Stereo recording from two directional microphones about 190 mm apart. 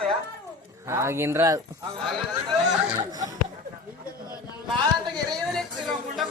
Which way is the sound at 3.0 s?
20° right (ahead or behind).